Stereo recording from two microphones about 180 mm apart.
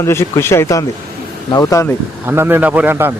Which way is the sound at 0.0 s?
15° left (ahead or behind).